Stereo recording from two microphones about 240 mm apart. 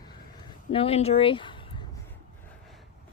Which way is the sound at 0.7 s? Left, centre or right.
Left.